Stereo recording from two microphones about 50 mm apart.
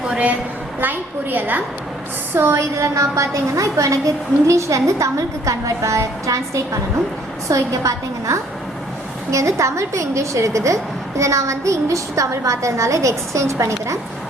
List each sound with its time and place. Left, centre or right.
0.1 s a woman's voice: right
0.8 s a woman's voice: right
2.3 s a woman's voice: right
2.9 s a woman's voice: right